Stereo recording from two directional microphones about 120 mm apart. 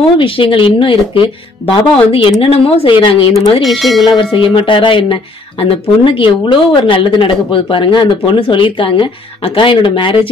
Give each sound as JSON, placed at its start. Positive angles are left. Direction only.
{"t": 0.2, "sound": "speech", "side_deg": 45}
{"t": 3.6, "sound": "speech", "side_deg": 0}
{"t": 4.0, "sound": "speech", "side_deg": 40}